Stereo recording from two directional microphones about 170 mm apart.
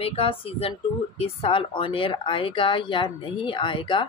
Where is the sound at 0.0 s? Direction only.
35° left (ahead or behind).